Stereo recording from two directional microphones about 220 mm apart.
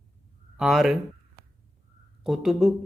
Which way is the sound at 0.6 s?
Centre (ahead or behind).